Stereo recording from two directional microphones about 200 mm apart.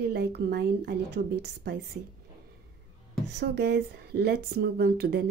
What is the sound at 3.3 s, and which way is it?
A woman's voice, 55° right (ahead or behind).